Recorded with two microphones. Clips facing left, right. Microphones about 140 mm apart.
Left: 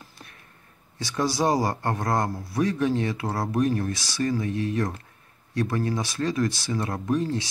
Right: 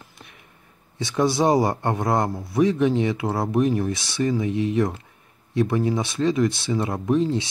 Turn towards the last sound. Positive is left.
turn(degrees=-20)  # may be behind; listen again after turning